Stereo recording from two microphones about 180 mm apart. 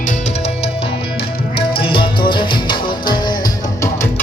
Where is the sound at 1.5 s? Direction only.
30° left (ahead or behind).